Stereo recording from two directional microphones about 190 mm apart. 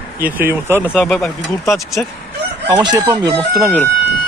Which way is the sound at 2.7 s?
20° right (ahead or behind).